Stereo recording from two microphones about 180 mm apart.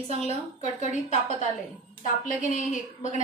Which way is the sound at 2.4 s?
45° left (ahead or behind).